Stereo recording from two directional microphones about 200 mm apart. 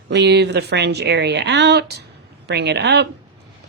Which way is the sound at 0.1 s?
60° right (ahead or behind).